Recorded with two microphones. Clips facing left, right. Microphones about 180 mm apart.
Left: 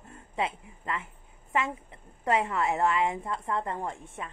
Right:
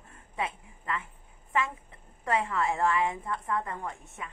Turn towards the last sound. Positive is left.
turn(degrees=25)  # may be behind; listen again after turning